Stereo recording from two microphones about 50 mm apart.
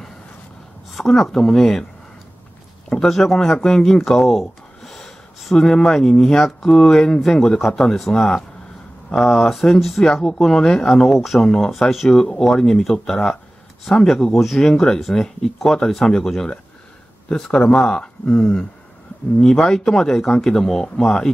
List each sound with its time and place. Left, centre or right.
0.9 s speech: centre
2.9 s speech: centre